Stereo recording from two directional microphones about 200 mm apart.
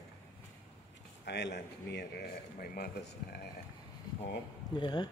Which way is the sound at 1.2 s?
60° left (ahead or behind).